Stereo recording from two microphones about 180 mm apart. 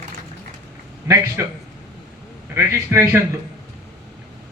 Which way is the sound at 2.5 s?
15° right (ahead or behind).